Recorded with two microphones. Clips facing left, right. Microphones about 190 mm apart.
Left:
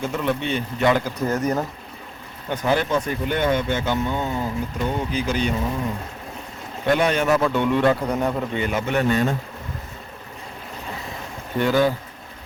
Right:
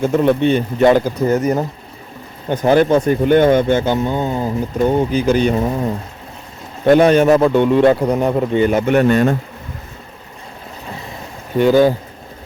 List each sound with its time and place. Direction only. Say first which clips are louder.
0.0 s speech: right 10 dB; 45° right (ahead or behind)
2.5 s speech: right 9 dB; 45° right (ahead or behind)
6.8 s speech: right 9 dB; 40° right (ahead or behind)
7.4 s a man's voice: right 7 dB; 30° right (ahead or behind)
8.7 s a man's voice: right 5 dB; 55° right (ahead or behind)
11.5 s a man's voice: right 8 dB; 20° right (ahead or behind)